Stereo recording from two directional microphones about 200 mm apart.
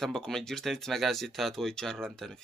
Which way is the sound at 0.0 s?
Centre (ahead or behind).